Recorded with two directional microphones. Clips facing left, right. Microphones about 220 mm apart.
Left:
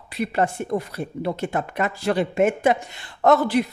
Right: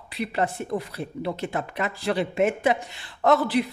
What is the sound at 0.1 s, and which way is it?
Speech, 45° left (ahead or behind).